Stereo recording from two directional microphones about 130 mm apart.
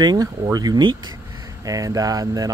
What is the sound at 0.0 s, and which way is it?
Speech, 30° right (ahead or behind).